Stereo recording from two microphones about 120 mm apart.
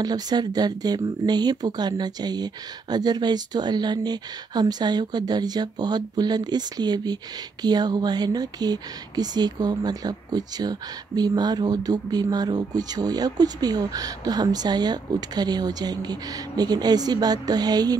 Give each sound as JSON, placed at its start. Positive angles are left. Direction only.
{"t": 0.0, "sound": "speech", "side_deg": -35}